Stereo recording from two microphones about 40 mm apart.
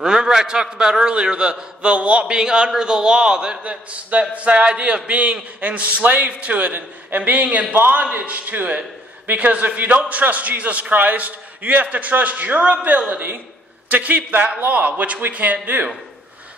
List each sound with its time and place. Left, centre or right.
0.0 s a man's voice: centre
2.3 s a man's voice: right
3.6 s a man's voice: right
7.7 s a man's voice: right
8.1 s a man's voice: right